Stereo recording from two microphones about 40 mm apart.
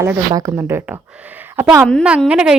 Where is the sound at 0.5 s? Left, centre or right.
Right.